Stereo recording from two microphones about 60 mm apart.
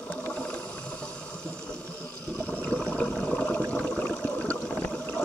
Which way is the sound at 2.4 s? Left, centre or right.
Left.